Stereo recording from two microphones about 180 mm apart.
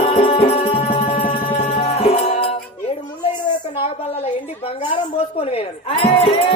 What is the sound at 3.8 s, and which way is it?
A woman's voice, 30° left (ahead or behind).